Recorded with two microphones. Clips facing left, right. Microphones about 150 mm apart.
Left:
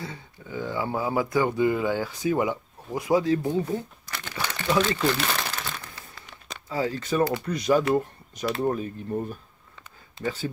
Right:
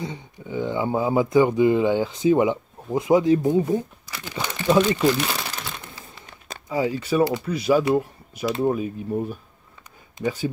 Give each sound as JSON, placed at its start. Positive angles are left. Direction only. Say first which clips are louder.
{"t": 0.0, "sound": "speech", "louder": "right 5 dB", "side_deg": -20}
{"t": 5.8, "sound": "a sound", "louder": "right 2 dB", "side_deg": -20}
{"t": 6.7, "sound": "speech", "louder": "right 4 dB", "side_deg": -15}